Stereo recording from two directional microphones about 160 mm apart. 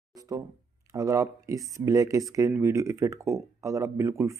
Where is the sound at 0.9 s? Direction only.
20° right (ahead or behind).